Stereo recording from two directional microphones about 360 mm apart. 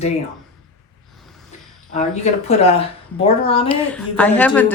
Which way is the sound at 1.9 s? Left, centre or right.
Centre.